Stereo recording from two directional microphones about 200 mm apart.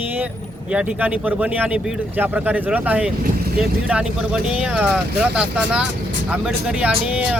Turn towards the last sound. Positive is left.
turn(degrees=-5)  # may be behind; listen again after turning